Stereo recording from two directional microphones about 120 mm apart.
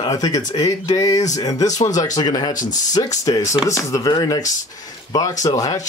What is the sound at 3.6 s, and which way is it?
Speech, 25° left (ahead or behind).